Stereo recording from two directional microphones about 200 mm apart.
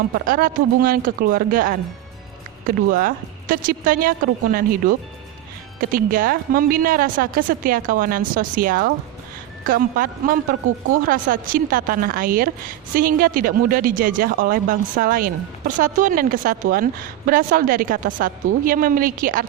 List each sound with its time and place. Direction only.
0.3 s speech: 45° right (ahead or behind)